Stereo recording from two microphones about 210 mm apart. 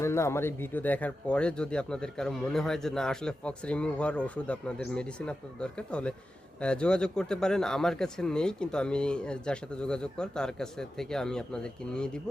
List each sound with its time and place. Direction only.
0.0 s speech: 15° left (ahead or behind)